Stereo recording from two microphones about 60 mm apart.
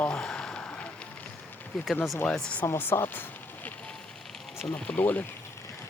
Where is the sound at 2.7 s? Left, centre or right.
Left.